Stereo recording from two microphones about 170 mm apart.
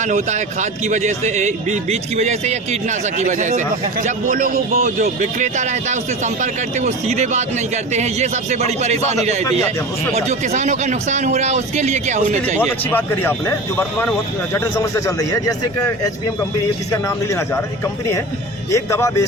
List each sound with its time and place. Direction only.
0.0 s a man's voice: 45° right (ahead or behind)
12.5 s a man's voice: 10° left (ahead or behind)
16.9 s speech: 15° left (ahead or behind)
18.7 s speech: 15° left (ahead or behind)